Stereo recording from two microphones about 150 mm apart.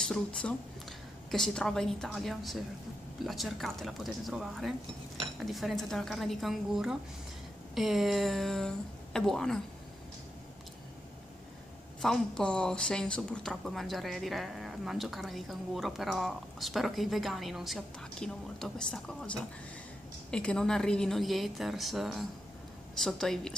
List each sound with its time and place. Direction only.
0.0 s a woman's voice: 5° left (ahead or behind)
12.0 s a woman's voice: 5° left (ahead or behind)